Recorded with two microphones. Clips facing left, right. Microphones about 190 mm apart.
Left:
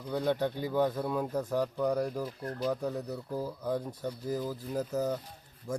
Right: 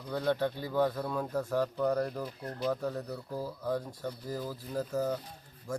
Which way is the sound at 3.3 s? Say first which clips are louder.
Left 1 dB; 15° left (ahead or behind).